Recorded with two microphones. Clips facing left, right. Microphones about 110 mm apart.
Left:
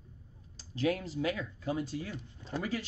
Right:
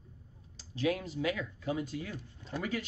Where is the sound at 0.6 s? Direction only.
40° left (ahead or behind).